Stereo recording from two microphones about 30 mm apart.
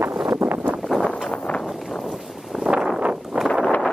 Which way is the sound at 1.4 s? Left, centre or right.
Left.